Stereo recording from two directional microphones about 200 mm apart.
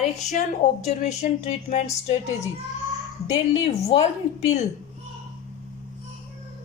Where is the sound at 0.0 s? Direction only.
35° left (ahead or behind).